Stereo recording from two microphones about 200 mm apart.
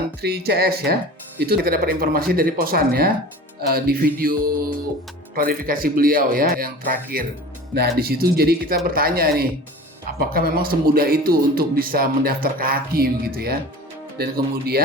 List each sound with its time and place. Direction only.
0.2 s speech: 55° right (ahead or behind)